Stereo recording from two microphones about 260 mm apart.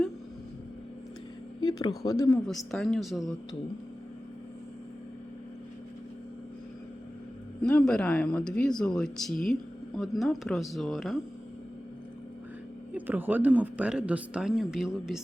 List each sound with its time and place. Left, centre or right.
1.6 s speech: centre
7.6 s speech: centre
12.9 s speech: centre